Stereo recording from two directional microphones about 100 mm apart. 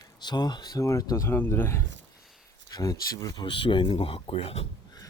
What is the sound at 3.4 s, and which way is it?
Speech, 60° left (ahead or behind).